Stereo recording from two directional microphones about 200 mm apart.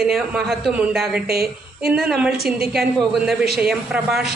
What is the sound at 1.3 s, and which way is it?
Speech, 50° right (ahead or behind).